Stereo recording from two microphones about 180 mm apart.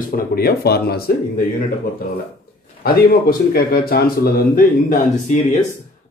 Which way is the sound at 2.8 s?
55° left (ahead or behind).